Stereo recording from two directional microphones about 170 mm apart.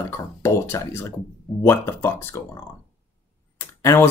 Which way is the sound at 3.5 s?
15° left (ahead or behind).